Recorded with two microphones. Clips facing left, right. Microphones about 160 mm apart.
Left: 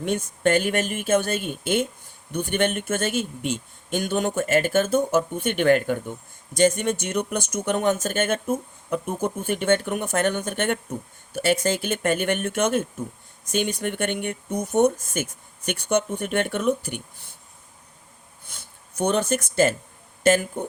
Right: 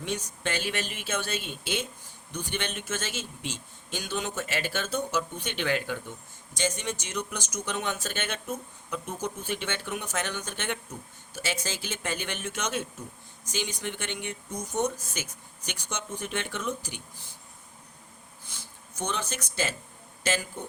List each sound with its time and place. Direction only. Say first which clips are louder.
0.0 s speech: left 10 dB; 55° left (ahead or behind)
18.9 s speech: left 11 dB; 60° left (ahead or behind)